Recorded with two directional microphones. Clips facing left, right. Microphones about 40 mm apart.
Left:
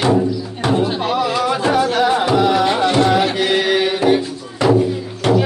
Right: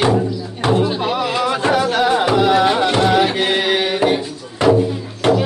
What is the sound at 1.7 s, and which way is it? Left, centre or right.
Music, centre.